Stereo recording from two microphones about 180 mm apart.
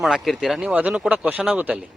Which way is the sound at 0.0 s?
Centre (ahead or behind).